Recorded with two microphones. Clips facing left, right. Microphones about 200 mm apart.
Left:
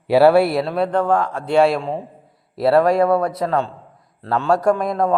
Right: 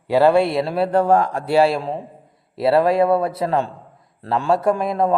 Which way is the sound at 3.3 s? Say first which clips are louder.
Even; 30° right (ahead or behind).